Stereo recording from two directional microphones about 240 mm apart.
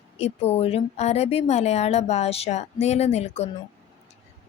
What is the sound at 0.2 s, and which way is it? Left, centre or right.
Speech, left.